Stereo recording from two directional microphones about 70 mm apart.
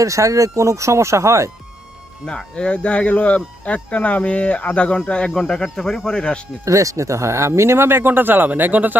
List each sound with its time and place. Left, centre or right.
0.0 s speech: right
2.2 s speech: centre
6.7 s speech: right